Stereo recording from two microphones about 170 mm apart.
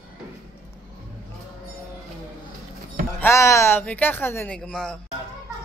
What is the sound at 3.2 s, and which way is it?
Speech, 15° left (ahead or behind).